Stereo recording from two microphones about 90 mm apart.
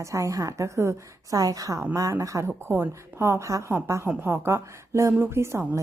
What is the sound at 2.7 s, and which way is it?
A woman's voice, 25° right (ahead or behind).